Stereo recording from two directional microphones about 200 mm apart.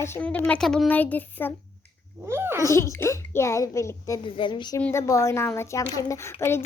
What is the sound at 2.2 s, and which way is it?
Cat, 10° right (ahead or behind).